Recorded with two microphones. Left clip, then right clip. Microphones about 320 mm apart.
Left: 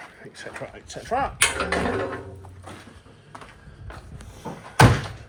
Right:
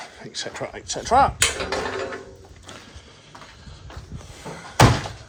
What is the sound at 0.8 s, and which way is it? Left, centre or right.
Speech, centre.